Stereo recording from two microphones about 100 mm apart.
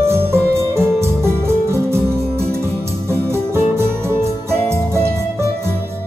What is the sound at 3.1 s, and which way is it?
Music, 25° right (ahead or behind).